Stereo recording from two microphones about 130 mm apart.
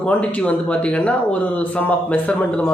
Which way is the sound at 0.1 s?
10° left (ahead or behind).